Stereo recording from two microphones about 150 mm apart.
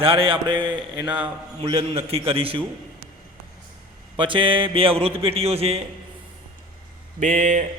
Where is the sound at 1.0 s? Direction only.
10° right (ahead or behind).